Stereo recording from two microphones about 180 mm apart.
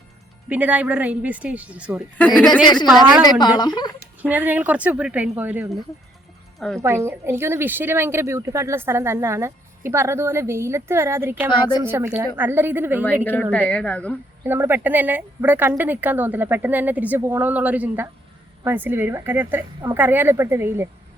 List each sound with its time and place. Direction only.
0.4 s a woman's voice: 10° right (ahead or behind)
2.1 s a woman's voice: 5° left (ahead or behind)
3.4 s a woman's voice: 25° left (ahead or behind)
4.2 s a woman's voice: 10° right (ahead or behind)
6.6 s a woman's voice: 5° left (ahead or behind)
6.8 s a woman's voice: 15° right (ahead or behind)
13.2 s a woman's voice: 10° left (ahead or behind)
14.4 s a woman's voice: 10° right (ahead or behind)